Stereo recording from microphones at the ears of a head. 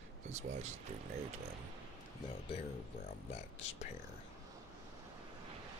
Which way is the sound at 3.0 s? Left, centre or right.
Left.